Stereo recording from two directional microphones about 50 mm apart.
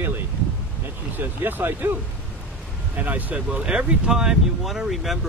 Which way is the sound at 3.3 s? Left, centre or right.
Right.